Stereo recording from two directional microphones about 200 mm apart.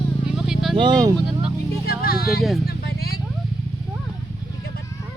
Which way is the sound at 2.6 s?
50° left (ahead or behind).